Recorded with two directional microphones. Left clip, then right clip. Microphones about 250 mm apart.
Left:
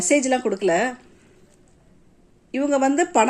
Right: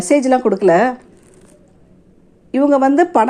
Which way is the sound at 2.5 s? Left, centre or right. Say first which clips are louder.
Right 7 dB; centre.